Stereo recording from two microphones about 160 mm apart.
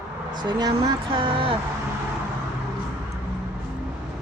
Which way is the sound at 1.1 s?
30° right (ahead or behind).